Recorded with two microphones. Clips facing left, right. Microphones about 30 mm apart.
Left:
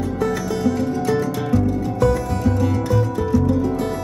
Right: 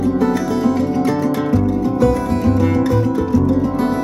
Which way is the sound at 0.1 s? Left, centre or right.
Centre.